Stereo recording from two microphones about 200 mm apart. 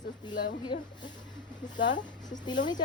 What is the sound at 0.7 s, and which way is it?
Speech, 55° left (ahead or behind).